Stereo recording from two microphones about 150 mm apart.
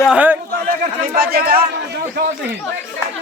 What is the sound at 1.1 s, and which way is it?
Speech, 90° right.